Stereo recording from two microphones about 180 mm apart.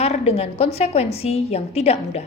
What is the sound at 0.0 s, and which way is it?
A woman's voice, 35° left (ahead or behind).